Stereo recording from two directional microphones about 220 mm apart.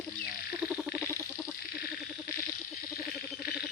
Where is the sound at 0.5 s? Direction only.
5° right (ahead or behind).